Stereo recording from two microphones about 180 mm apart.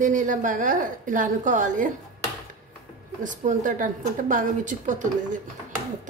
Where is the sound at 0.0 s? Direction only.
45° right (ahead or behind).